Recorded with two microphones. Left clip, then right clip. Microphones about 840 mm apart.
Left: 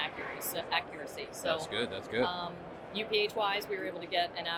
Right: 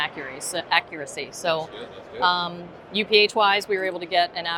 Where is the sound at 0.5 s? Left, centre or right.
Right.